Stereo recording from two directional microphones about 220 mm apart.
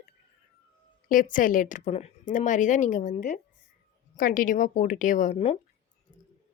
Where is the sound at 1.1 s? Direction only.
35° left (ahead or behind).